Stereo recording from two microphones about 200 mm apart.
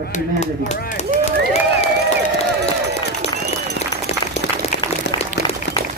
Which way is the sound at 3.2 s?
30° left (ahead or behind).